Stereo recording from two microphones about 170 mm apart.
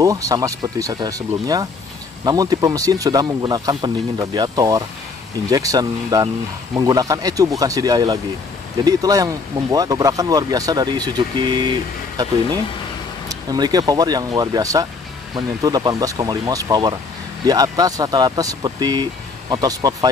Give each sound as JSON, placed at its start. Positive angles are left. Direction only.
{"t": 0.0, "sound": "speech", "side_deg": -20}